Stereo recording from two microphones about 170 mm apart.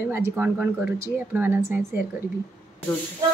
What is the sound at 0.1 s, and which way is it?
Speech, 10° right (ahead or behind).